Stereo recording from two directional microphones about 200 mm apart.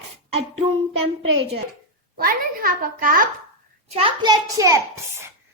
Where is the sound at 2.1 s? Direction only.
45° right (ahead or behind).